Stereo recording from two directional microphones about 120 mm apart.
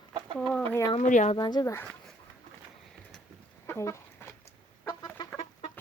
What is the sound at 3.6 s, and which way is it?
Chicken, 25° left (ahead or behind).